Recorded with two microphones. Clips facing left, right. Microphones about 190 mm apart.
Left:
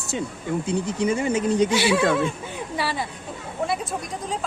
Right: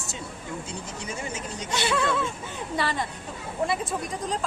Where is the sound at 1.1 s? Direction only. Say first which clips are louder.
Left 13 dB; 60° left (ahead or behind).